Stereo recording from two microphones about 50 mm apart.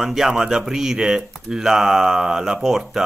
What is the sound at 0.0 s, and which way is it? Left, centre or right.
Speech, centre.